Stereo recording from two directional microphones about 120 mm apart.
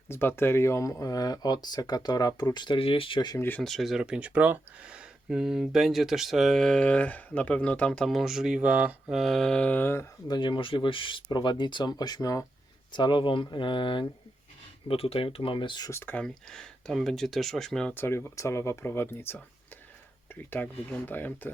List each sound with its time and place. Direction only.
0.1 s speech: 20° left (ahead or behind); by 3.3 s 45° left (ahead or behind)
3.3 s speech: 15° left (ahead or behind)
3.6 s speech: centre (ahead or behind); by 10.1 s 20° left (ahead or behind)
10.2 s speech: 40° left (ahead or behind)
12.9 s speech: 40° left (ahead or behind)
15.9 s speech: 20° left (ahead or behind)
17.9 s speech: 15° left (ahead or behind)
20.5 s speech: 15° left (ahead or behind)